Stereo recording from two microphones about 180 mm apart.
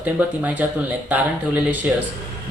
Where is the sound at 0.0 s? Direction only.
10° right (ahead or behind).